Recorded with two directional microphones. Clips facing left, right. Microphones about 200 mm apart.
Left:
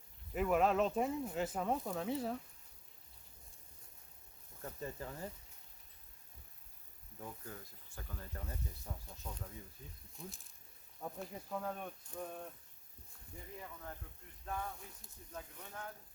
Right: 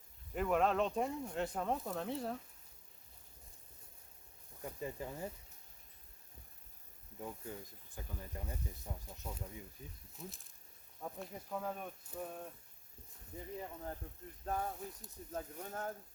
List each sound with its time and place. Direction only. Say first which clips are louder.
0.3 s speech: left 1 dB; 5° left (ahead or behind)
4.6 s speech: right 2 dB; 15° right (ahead or behind)
7.2 s speech: right 3 dB; 15° right (ahead or behind)
10.2 s speech: even; centre (ahead or behind)
13.6 s speech: right 4 dB; 30° right (ahead or behind)